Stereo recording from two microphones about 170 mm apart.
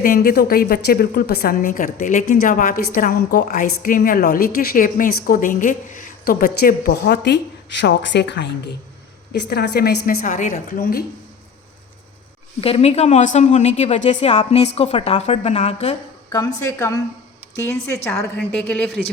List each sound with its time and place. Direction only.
0.0 s a woman's voice: 60° left (ahead or behind); by 8.7 s 85° left
9.3 s a woman's voice: 75° left (ahead or behind); by 11.0 s 60° left (ahead or behind)
12.6 s a woman's voice: 35° left (ahead or behind)
16.3 s a woman's voice: 20° left (ahead or behind)